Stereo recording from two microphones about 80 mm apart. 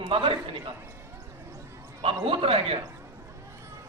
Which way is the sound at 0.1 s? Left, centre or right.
Right.